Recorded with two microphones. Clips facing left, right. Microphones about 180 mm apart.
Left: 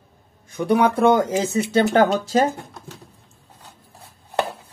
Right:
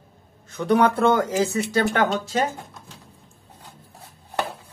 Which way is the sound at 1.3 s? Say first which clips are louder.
Left 2 dB; 25° left (ahead or behind).